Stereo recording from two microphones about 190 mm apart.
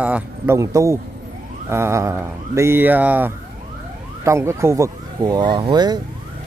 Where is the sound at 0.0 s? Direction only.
10° right (ahead or behind).